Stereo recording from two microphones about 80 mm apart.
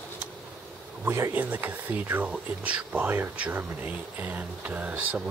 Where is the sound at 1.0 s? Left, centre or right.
Right; by 3.0 s centre.